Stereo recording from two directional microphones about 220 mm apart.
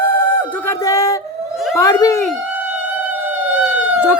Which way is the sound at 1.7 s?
15° left (ahead or behind).